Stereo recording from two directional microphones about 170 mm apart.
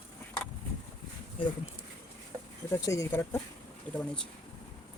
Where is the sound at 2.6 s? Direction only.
15° left (ahead or behind).